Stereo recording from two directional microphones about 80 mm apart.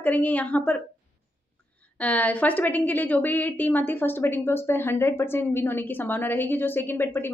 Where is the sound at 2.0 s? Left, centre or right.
Centre.